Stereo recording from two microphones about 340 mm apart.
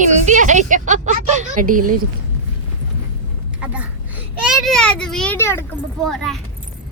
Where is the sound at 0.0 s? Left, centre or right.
Right.